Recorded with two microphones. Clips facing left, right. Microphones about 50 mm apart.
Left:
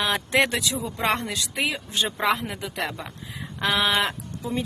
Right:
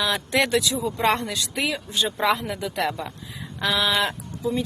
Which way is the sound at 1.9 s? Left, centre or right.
Left.